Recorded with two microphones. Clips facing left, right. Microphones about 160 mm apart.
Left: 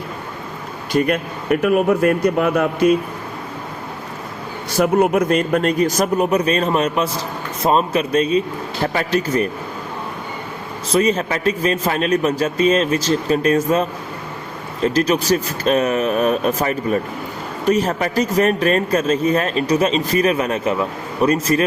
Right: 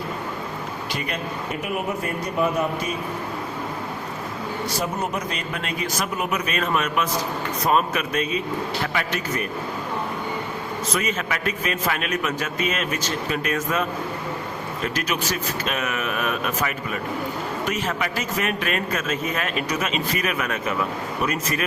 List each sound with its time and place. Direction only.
0.9 s speech: 50° left (ahead or behind)
1.5 s speech: 85° left
4.8 s a man's voice: 65° left (ahead or behind); by 9.5 s 35° left (ahead or behind)
10.9 s a man's voice: 35° left (ahead or behind)
14.8 s a man's voice: 35° left (ahead or behind)